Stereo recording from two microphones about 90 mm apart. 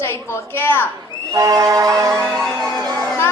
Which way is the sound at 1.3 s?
40° right (ahead or behind).